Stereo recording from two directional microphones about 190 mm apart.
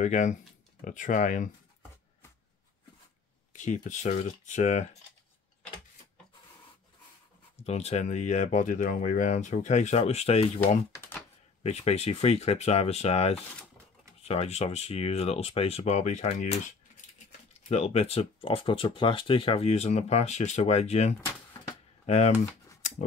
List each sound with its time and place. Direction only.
0.0 s speech: 40° left (ahead or behind)
3.5 s speech: 40° left (ahead or behind)
7.5 s speech: 35° left (ahead or behind)
11.6 s speech: 35° left (ahead or behind)
21.2 s a sound: 15° left (ahead or behind)
22.0 s speech: 35° left (ahead or behind)